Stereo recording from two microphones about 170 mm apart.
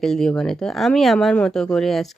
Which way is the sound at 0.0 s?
Centre (ahead or behind).